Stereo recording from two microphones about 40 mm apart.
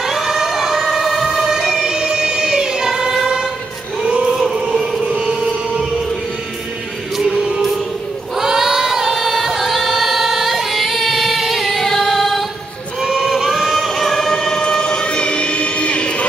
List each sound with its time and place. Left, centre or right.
0.0 s emergency vehicle: centre
1.7 s music: centre
4.0 s choir: right
4.3 s a sound: centre
5.0 s music: centre
8.4 s choir: centre
13.0 s choir: centre
13.3 s singing: centre; by 16.3 s left